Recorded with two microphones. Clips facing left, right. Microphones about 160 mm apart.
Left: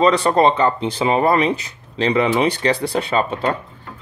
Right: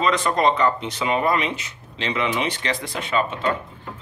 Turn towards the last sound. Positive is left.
turn(degrees=35)  # may be behind; listen again after turning